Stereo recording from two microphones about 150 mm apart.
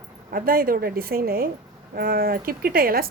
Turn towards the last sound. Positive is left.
turn(degrees=-80)